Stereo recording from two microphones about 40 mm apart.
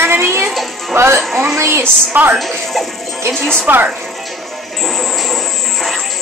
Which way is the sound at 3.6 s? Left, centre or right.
Right.